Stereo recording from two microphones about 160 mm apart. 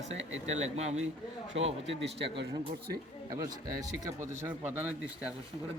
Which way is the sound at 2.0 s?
90° right.